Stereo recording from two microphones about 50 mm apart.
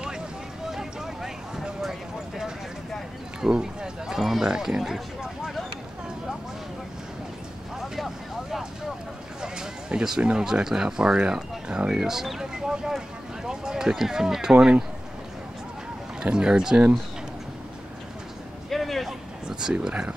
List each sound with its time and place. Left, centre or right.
0.7 s vehicle: centre
3.3 s speech: centre
7.8 s vehicle: centre
9.4 s speech: centre
12.1 s a sound: centre
16.3 s speech: centre
18.7 s a sound: centre
19.4 s a sound: centre
19.9 s speech: centre